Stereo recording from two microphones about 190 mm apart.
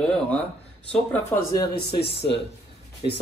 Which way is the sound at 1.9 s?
60° left (ahead or behind).